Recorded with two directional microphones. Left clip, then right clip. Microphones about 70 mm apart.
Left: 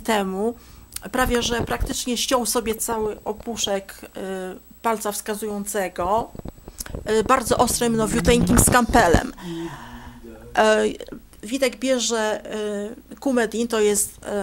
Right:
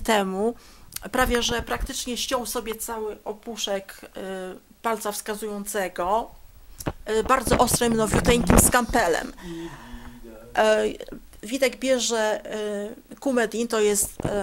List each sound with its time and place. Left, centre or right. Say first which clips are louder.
0.0 s speech: even; centre
1.9 s speech: left 4 dB; centre
2.1 s speech: left 6 dB; left; by 6.3 s centre
7.1 s speech: left 3 dB; centre
8.9 s speech: left 5 dB; centre